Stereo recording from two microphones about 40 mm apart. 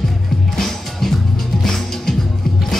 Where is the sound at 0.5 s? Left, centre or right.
Centre.